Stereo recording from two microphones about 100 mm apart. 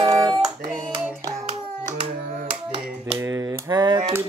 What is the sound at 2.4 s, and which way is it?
Hands, 60° right (ahead or behind).